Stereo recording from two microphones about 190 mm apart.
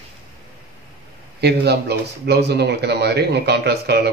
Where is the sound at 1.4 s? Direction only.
60° right (ahead or behind).